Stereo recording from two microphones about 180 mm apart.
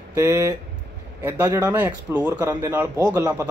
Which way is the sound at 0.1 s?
15° right (ahead or behind).